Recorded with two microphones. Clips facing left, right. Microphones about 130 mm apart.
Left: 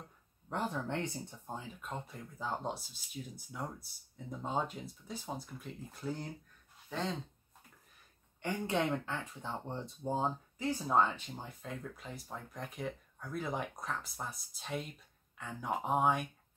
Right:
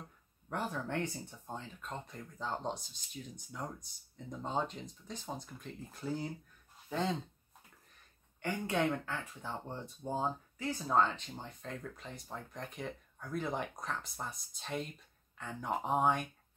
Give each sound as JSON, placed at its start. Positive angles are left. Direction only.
{"t": 0.5, "sound": "speech", "side_deg": 20}
{"t": 1.5, "sound": "speech", "side_deg": 5}
{"t": 8.4, "sound": "speech", "side_deg": 20}